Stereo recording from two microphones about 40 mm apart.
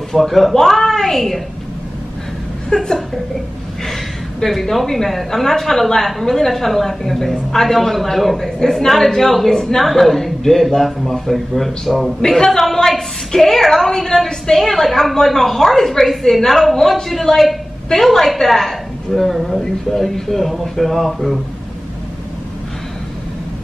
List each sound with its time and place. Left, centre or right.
0.1 s speech: centre
2.7 s a woman's voice: centre
4.4 s a woman's voice: centre